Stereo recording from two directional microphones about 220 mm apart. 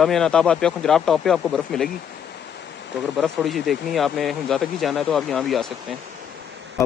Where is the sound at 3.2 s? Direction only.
Centre (ahead or behind).